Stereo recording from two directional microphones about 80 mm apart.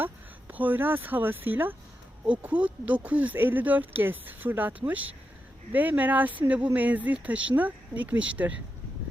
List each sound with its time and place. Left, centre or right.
0.0 s speech: right